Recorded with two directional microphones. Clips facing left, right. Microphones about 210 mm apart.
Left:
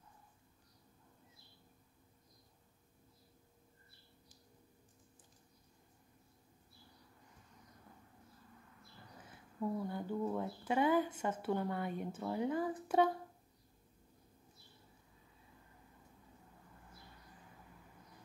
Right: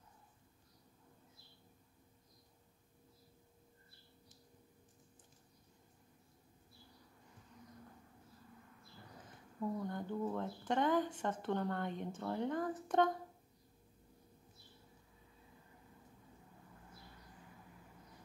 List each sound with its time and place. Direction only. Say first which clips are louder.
9.6 s speech: left 1 dB; 10° left (ahead or behind)